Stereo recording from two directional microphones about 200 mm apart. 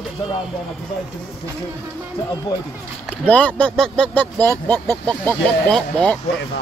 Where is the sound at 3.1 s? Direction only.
10° left (ahead or behind).